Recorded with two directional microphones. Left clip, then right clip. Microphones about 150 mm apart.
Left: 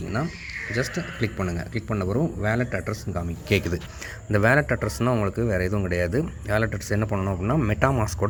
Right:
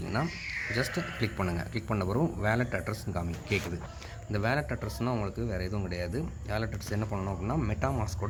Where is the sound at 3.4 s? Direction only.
55° left (ahead or behind).